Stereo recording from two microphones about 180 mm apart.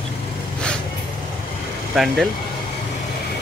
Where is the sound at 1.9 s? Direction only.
Centre (ahead or behind).